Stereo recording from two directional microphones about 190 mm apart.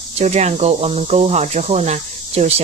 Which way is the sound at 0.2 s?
35° right (ahead or behind).